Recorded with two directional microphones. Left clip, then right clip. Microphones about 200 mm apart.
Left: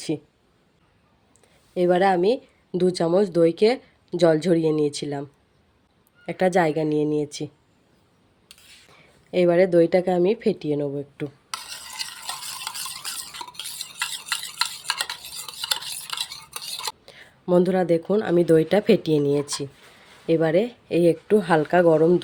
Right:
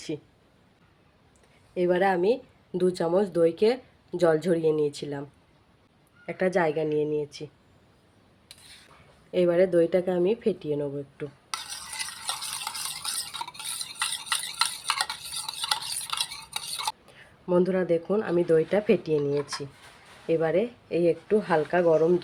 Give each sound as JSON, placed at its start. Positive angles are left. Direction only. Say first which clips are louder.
{"t": 1.7, "sound": "speech", "louder": "left 5 dB", "side_deg": 50}
{"t": 6.2, "sound": "speech", "louder": "left 5 dB", "side_deg": 50}
{"t": 9.3, "sound": "speech", "louder": "left 4 dB", "side_deg": 45}
{"t": 11.5, "sound": "stir", "louder": "right 1 dB", "side_deg": 0}
{"t": 13.4, "sound": "stir", "louder": "left 1 dB", "side_deg": 0}
{"t": 17.1, "sound": "speech", "louder": "left 8 dB", "side_deg": 50}